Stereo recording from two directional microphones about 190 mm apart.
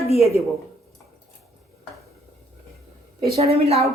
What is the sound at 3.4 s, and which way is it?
Speech, 35° right (ahead or behind).